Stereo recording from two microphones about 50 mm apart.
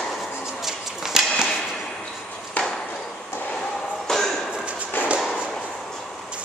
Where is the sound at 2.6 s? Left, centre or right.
Left.